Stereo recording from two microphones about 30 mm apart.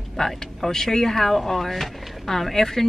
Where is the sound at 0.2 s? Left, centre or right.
Left.